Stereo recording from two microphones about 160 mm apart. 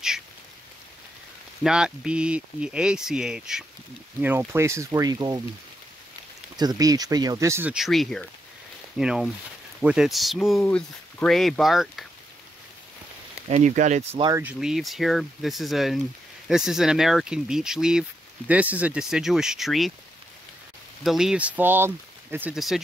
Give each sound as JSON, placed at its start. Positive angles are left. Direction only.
{"t": 1.6, "sound": "speech", "side_deg": -5}
{"t": 6.5, "sound": "speech", "side_deg": -25}
{"t": 7.7, "sound": "speech", "side_deg": 0}
{"t": 13.5, "sound": "speech", "side_deg": -45}
{"t": 14.3, "sound": "speech", "side_deg": -5}
{"t": 21.0, "sound": "speech", "side_deg": 0}